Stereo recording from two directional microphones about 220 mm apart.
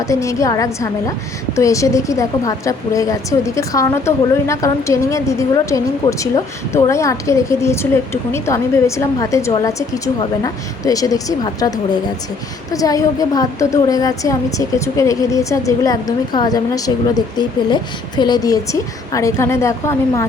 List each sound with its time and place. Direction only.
0.0 s speech: 15° left (ahead or behind)
12.7 s speech: 15° left (ahead or behind)